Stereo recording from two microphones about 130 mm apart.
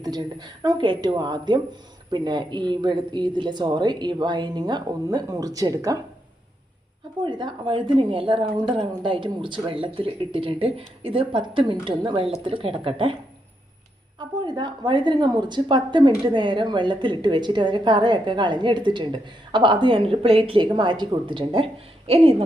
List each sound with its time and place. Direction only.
0.0 s a woman's voice: 30° right (ahead or behind)
7.3 s a woman's voice: 35° right (ahead or behind)
14.2 s a woman's voice: 35° right (ahead or behind)
20.7 s a woman's voice: 35° right (ahead or behind)